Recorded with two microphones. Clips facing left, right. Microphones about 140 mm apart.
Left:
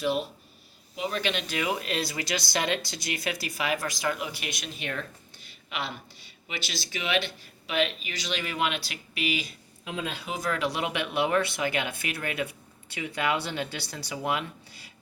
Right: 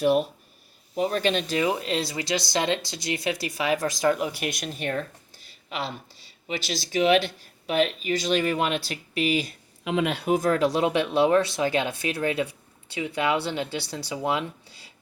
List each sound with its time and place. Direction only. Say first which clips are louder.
0.0 s speech: right 6 dB; 55° right (ahead or behind)
0.9 s speech: right 6 dB; 40° right (ahead or behind)
9.8 s speech: right 9 dB; 80° right
10.2 s speech: right 7 dB; 50° right (ahead or behind); by 14.4 s 25° right (ahead or behind)